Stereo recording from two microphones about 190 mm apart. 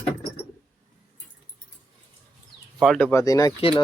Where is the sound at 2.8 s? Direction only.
Centre (ahead or behind).